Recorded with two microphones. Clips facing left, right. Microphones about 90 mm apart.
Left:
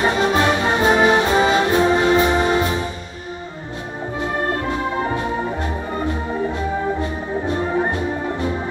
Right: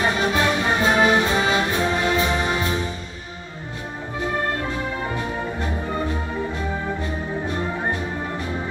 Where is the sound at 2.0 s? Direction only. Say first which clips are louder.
Left 6 dB; 40° left (ahead or behind).